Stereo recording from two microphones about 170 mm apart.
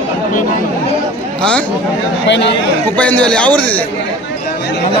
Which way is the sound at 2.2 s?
90° left.